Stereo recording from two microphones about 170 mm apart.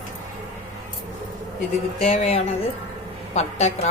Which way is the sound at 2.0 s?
40° left (ahead or behind).